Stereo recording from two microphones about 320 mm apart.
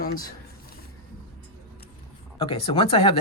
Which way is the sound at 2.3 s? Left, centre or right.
Centre.